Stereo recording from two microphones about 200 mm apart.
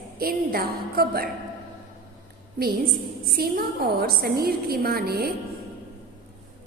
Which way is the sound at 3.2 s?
50° right (ahead or behind).